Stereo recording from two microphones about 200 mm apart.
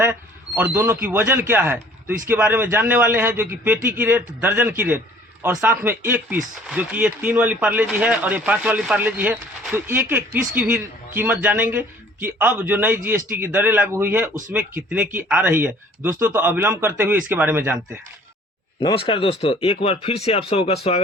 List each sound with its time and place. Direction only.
0.0 s a man's voice: 10° right (ahead or behind)
18.8 s speech: 25° left (ahead or behind)